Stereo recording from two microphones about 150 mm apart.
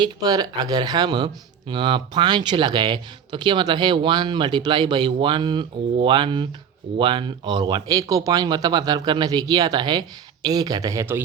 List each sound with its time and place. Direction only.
0.0 s speech: 25° right (ahead or behind)